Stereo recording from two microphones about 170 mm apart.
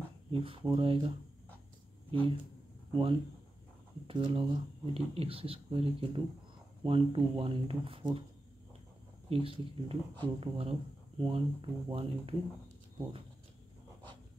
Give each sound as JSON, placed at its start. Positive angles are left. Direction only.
{"t": 0.3, "sound": "speech", "side_deg": -30}
{"t": 9.3, "sound": "speech", "side_deg": -35}